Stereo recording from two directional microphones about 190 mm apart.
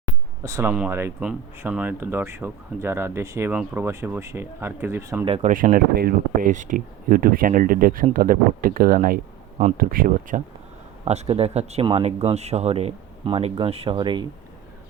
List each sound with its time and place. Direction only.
0.4 s speech: 15° right (ahead or behind)
5.2 s speech: 30° right (ahead or behind)
5.5 s speech: 45° right (ahead or behind)
11.0 s speech: 30° right (ahead or behind)